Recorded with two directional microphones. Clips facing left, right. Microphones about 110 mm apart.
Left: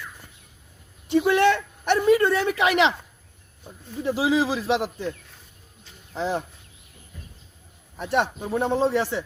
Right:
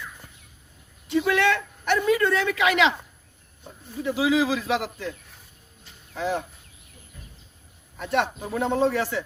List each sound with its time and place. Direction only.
1.1 s a man's voice: 30° left (ahead or behind)
4.0 s a man's voice: 35° left (ahead or behind)
6.1 s a man's voice: 30° left (ahead or behind)
7.9 s a man's voice: 30° left (ahead or behind)